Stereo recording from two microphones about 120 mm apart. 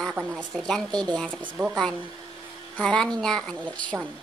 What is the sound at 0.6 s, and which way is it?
Speech, 5° left (ahead or behind).